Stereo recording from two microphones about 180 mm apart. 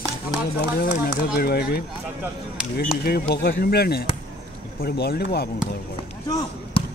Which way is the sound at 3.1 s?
60° left (ahead or behind).